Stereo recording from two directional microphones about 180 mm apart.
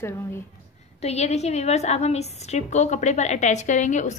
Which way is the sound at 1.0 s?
35° left (ahead or behind).